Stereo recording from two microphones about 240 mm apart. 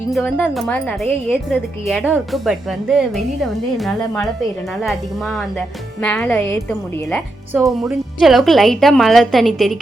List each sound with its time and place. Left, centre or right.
0.1 s a woman's voice: centre